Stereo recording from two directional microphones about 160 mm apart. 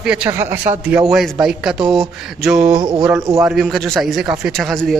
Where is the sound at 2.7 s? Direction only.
30° right (ahead or behind).